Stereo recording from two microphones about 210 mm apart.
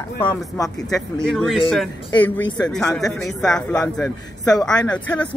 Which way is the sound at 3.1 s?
5° left (ahead or behind).